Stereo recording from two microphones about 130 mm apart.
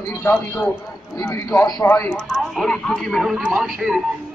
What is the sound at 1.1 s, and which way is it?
Speech, 25° left (ahead or behind).